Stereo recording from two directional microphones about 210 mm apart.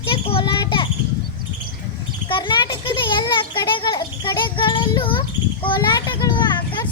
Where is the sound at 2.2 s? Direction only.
25° left (ahead or behind).